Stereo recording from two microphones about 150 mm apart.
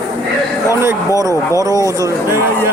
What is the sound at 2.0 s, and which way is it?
Speech, 20° right (ahead or behind).